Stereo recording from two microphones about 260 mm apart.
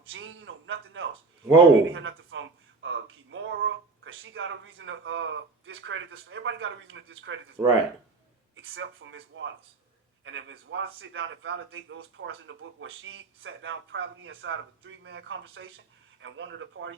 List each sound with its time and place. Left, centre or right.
0.1 s a man's voice: right